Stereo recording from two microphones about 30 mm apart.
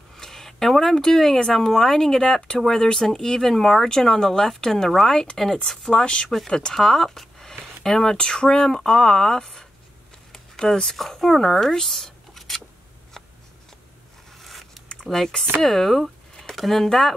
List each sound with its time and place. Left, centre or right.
0.1 s speech: centre
5.9 s speech: left
6.7 s speech: centre
7.2 s a sound: centre
8.3 s speech: left
10.3 s a sound: centre
11.0 s speech: centre
11.7 s a sound: centre
13.2 s scissors: centre
14.4 s zipper: centre
15.0 s speech: centre